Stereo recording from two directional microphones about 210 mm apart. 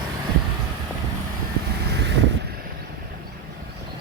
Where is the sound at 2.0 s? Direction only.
55° right (ahead or behind).